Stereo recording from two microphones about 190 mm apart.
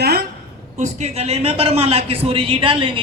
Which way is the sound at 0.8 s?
35° right (ahead or behind).